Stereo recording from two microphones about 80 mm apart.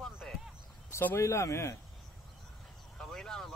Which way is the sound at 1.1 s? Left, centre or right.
Left.